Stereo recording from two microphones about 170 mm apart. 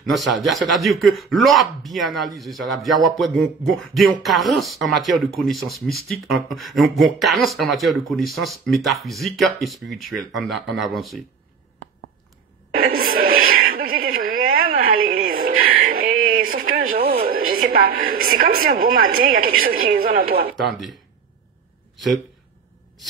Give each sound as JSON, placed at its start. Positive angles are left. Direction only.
{"t": 0.1, "sound": "speech", "side_deg": 0}
{"t": 12.7, "sound": "a sound", "side_deg": -60}
{"t": 17.3, "sound": "a woman's voice", "side_deg": -55}
{"t": 20.5, "sound": "speech", "side_deg": 0}